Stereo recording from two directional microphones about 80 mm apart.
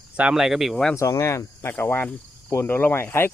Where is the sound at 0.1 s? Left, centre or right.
Centre.